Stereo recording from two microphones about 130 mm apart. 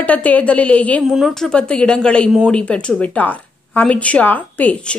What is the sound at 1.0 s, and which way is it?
Speech, centre (ahead or behind).